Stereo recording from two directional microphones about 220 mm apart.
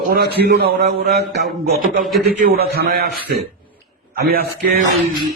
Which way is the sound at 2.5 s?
45° right (ahead or behind).